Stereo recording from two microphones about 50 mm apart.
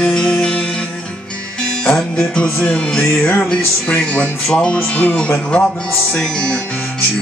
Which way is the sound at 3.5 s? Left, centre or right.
Left.